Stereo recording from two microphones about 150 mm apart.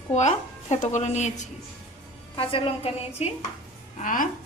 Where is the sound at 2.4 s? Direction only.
35° left (ahead or behind).